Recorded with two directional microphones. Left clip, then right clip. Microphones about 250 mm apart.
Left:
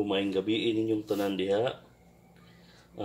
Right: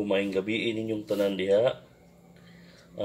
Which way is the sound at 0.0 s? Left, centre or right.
Left.